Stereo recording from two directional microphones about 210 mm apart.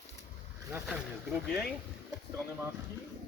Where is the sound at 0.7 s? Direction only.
5° right (ahead or behind).